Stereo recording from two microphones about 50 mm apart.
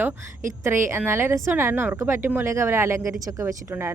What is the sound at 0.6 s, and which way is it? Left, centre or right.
Speech, right.